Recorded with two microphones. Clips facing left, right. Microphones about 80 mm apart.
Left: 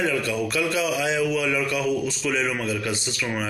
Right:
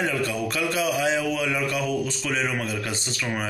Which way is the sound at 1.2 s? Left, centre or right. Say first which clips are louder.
Left 2 dB; right.